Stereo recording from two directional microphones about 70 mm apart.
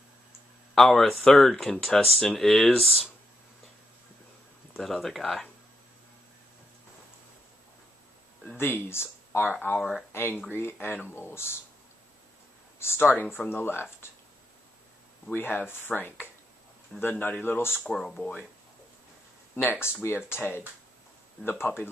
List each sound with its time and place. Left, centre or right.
0.7 s speech: centre
4.7 s speech: centre
8.5 s speech: left
9.8 s speech: centre
10.1 s speech: left
12.7 s speech: left
15.3 s speech: left
17.8 s speech: centre
19.5 s speech: left